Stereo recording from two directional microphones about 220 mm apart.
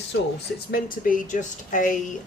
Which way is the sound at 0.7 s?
40° left (ahead or behind).